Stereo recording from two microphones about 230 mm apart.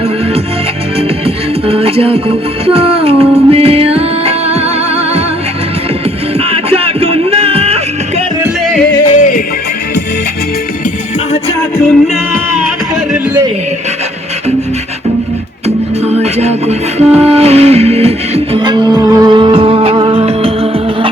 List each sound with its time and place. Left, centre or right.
1.2 s music: right
6.4 s music: right
9.0 s music: left
15.6 s music: right